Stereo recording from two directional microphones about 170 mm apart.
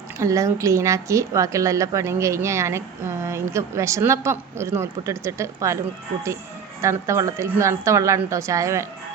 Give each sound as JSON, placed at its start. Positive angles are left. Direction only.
{"t": 0.2, "sound": "a woman's voice", "side_deg": -20}
{"t": 6.8, "sound": "a woman's voice", "side_deg": -20}